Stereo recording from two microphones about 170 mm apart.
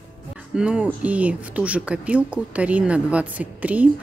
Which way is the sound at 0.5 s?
5° right (ahead or behind).